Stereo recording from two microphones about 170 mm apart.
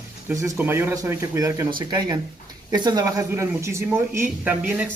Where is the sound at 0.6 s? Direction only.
15° right (ahead or behind).